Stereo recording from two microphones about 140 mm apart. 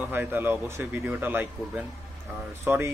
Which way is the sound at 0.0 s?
15° right (ahead or behind).